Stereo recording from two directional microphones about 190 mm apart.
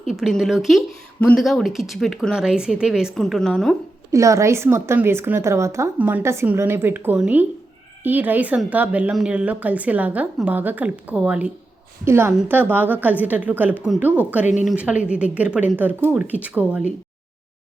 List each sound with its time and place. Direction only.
0.1 s a woman's voice: centre (ahead or behind)
4.1 s a woman's voice: 15° right (ahead or behind)
14.4 s speech: 40° left (ahead or behind)
14.7 s a woman's voice: 5° right (ahead or behind)